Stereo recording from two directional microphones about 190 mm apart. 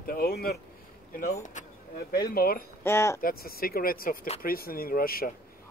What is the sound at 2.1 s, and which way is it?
Speech, 50° left (ahead or behind).